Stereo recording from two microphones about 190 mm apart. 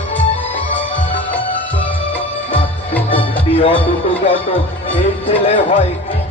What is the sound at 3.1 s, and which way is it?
Music, 30° left (ahead or behind).